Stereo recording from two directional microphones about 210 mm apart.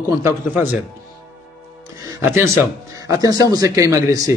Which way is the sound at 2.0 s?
10° right (ahead or behind).